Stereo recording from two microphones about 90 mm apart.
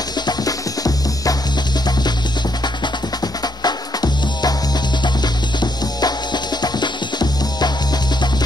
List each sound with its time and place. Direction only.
0.3 s music: 40° left (ahead or behind)
3.6 s music: 50° left (ahead or behind)